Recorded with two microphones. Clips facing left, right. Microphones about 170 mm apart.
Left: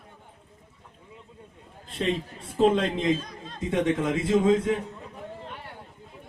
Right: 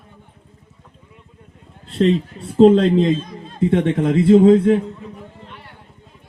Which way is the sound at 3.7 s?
65° right (ahead or behind).